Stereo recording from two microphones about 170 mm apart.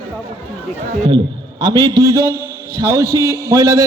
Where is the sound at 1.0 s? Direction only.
30° right (ahead or behind).